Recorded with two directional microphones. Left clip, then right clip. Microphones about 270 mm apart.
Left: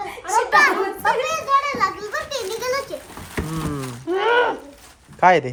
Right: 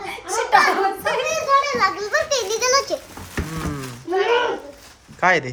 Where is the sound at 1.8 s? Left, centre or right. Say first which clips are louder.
Right 3 dB; right.